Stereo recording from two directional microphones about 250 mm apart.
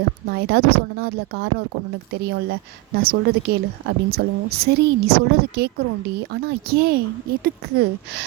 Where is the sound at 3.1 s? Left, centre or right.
Right.